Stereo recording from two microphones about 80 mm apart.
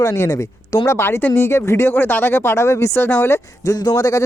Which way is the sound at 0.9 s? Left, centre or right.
Left.